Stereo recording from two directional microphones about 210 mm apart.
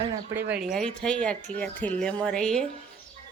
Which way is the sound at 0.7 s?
5° left (ahead or behind).